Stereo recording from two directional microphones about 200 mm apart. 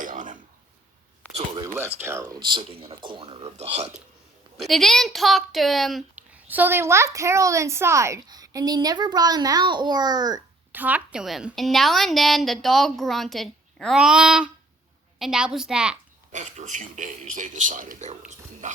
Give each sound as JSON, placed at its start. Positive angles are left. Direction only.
{"t": 0.0, "sound": "a sound", "side_deg": -40}
{"t": 1.3, "sound": "a sound", "side_deg": -25}
{"t": 2.0, "sound": "speech", "side_deg": -15}
{"t": 4.5, "sound": "a woman's voice", "side_deg": 0}
{"t": 10.7, "sound": "a woman's voice", "side_deg": -10}
{"t": 16.3, "sound": "a man's voice", "side_deg": -35}